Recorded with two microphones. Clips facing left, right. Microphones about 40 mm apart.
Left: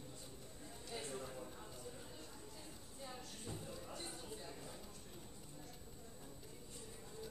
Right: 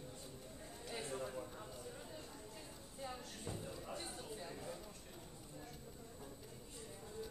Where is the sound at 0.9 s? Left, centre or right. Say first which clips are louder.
Right 2 dB; right.